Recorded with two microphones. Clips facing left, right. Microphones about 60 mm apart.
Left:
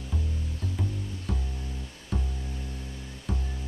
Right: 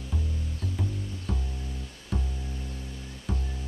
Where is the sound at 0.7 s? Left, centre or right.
Centre.